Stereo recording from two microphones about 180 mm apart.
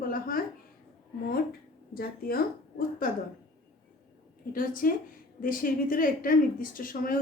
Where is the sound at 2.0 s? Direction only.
55° left (ahead or behind).